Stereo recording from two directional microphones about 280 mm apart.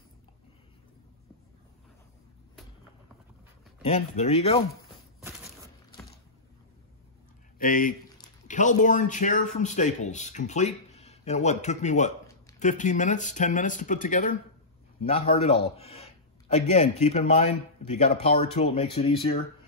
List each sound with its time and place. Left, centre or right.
3.8 s a man's voice: left
7.5 s a man's voice: left